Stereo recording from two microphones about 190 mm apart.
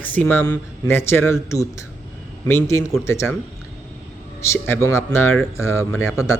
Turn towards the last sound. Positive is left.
turn(degrees=15)  # may be behind; listen again after turning